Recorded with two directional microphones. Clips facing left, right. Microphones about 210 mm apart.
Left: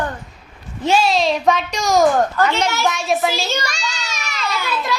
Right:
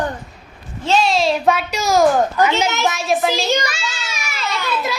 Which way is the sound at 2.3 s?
15° right (ahead or behind).